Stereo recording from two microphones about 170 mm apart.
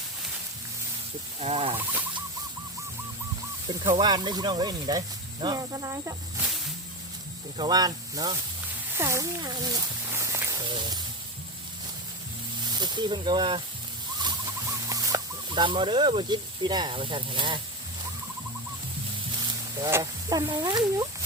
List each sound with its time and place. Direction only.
1.4 s speech: 35° right (ahead or behind)
1.8 s speech: 10° right (ahead or behind)
3.7 s speech: 25° right (ahead or behind)
7.5 s speech: 25° right (ahead or behind)
9.0 s a sound: 15° right (ahead or behind)
10.7 s speech: 25° right (ahead or behind)
12.6 s speech: 25° right (ahead or behind)
14.2 s chicken: 25° right (ahead or behind)
19.8 s speech: 20° right (ahead or behind)